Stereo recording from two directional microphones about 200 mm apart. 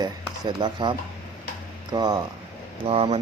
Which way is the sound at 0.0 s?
20° right (ahead or behind).